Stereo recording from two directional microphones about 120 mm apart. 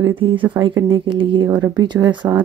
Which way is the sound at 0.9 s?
45° right (ahead or behind).